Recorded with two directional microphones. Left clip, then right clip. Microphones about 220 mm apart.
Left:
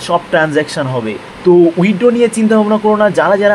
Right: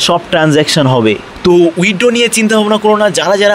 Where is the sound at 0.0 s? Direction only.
45° right (ahead or behind).